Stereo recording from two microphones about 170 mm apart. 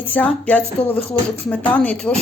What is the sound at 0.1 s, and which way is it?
A woman's voice, 10° left (ahead or behind).